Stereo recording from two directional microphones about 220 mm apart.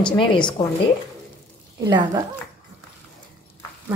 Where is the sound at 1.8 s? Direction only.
20° right (ahead or behind).